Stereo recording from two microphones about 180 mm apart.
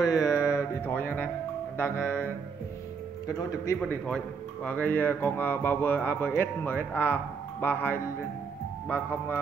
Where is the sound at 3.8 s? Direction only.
5° left (ahead or behind).